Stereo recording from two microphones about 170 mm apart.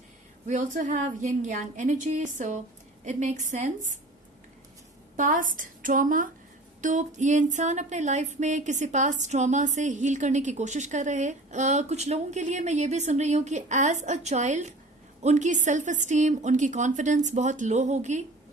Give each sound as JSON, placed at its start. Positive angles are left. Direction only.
{"t": 0.4, "sound": "music", "side_deg": -45}
{"t": 5.1, "sound": "music", "side_deg": -50}